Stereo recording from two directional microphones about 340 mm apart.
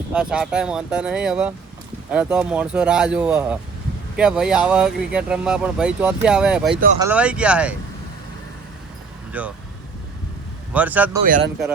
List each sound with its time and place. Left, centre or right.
0.1 s speech: centre
9.3 s speech: centre
10.8 s speech: centre